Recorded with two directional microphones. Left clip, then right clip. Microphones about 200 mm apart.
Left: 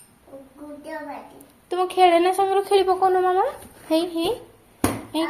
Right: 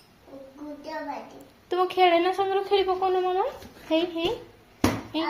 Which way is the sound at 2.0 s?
25° left (ahead or behind).